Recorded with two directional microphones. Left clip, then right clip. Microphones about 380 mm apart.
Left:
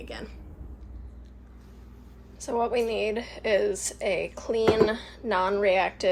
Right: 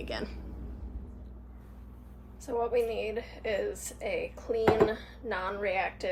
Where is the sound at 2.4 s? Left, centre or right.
Left.